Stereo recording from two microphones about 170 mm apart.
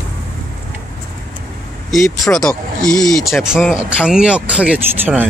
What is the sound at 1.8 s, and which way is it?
Speech, centre (ahead or behind).